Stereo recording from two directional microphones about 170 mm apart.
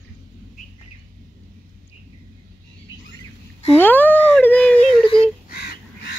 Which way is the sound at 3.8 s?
10° left (ahead or behind).